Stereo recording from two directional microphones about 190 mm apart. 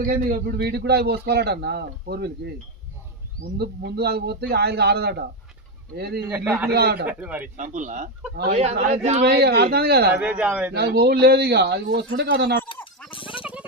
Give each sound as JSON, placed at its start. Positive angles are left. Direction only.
{"t": 0.0, "sound": "a man's voice", "side_deg": -45}
{"t": 3.6, "sound": "a man's voice", "side_deg": -60}
{"t": 6.2, "sound": "speech", "side_deg": -10}
{"t": 6.7, "sound": "a man's voice", "side_deg": -55}
{"t": 7.1, "sound": "speech", "side_deg": -10}
{"t": 7.5, "sound": "speech", "side_deg": -40}
{"t": 9.2, "sound": "a man's voice", "side_deg": -55}
{"t": 10.1, "sound": "speech", "side_deg": -5}
{"t": 10.8, "sound": "a man's voice", "side_deg": -55}
{"t": 12.6, "sound": "goat", "side_deg": 25}
{"t": 13.1, "sound": "a sound", "side_deg": 25}
{"t": 13.4, "sound": "music", "side_deg": -5}